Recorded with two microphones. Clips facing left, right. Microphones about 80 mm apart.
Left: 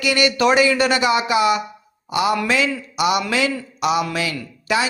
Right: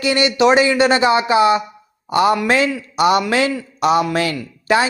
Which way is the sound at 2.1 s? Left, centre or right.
Right.